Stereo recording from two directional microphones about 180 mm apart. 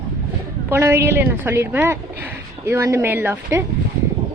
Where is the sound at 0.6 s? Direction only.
15° right (ahead or behind).